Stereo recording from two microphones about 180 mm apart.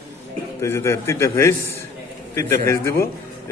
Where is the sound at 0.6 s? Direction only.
15° left (ahead or behind).